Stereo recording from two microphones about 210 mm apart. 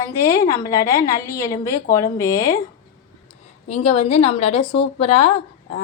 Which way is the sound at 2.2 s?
45° left (ahead or behind).